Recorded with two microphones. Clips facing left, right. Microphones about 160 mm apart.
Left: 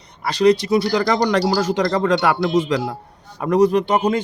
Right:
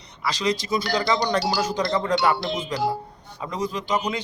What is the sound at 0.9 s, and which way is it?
Speech, 85° left.